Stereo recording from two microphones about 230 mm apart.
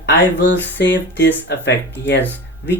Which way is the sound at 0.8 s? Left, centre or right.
Left.